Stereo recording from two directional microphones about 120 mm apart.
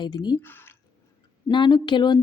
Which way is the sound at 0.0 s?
35° left (ahead or behind).